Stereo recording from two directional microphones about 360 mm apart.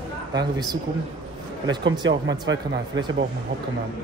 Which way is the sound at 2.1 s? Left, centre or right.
Right.